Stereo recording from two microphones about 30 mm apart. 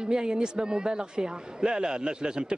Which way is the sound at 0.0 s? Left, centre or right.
Right.